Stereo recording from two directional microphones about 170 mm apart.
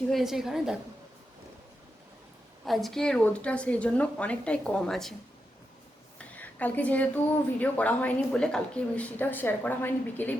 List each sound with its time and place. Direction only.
0.1 s a woman's voice: centre (ahead or behind)
2.6 s a woman's voice: centre (ahead or behind)
6.1 s a sound: 10° left (ahead or behind)
7.6 s a woman's voice: 10° left (ahead or behind)